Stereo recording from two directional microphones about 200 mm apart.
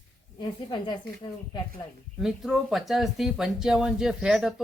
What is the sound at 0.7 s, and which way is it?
Speech, 20° left (ahead or behind).